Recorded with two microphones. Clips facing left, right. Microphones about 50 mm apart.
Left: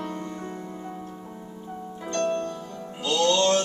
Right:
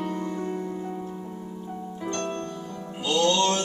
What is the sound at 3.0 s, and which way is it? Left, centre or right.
Music, centre.